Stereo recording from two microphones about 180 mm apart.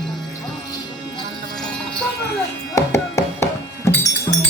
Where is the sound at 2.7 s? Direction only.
15° left (ahead or behind).